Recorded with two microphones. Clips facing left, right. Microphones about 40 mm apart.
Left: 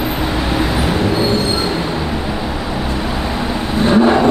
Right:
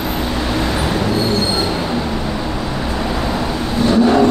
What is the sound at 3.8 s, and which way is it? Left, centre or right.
Vehicle, left.